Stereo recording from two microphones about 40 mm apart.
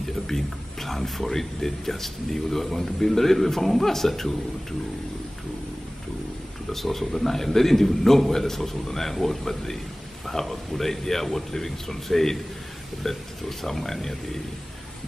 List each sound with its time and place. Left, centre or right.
0.3 s speech: centre
6.7 s speech: centre